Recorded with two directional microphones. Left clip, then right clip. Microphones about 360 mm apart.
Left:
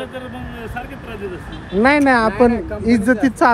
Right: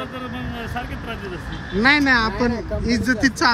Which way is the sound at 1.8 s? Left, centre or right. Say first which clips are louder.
Left 3 dB; centre.